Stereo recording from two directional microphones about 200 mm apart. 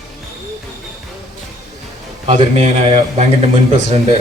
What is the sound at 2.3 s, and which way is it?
A man's voice, 30° right (ahead or behind).